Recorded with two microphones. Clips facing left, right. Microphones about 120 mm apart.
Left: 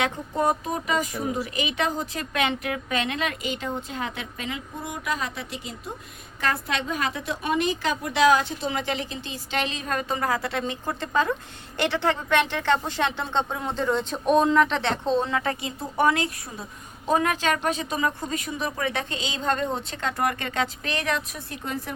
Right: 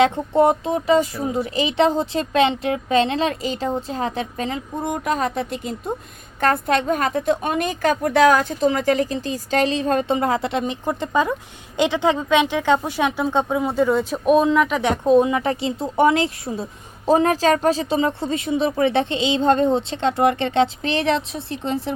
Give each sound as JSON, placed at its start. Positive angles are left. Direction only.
{"t": 0.0, "sound": "a woman's voice", "side_deg": -25}